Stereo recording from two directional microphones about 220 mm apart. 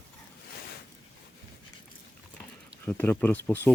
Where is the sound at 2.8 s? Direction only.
10° left (ahead or behind).